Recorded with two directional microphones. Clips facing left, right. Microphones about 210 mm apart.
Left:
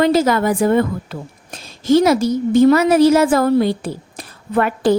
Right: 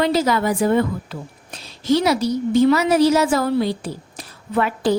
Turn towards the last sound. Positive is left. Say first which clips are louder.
# left 4 dB
turn(degrees=55)  # may be behind; listen again after turning